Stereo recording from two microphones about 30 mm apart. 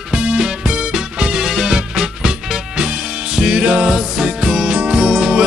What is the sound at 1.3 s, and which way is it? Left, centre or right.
Music, centre.